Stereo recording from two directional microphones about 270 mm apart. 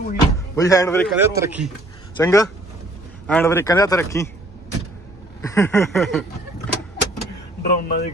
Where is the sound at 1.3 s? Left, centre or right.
Centre.